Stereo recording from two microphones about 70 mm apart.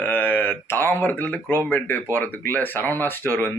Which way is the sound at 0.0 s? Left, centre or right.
Left.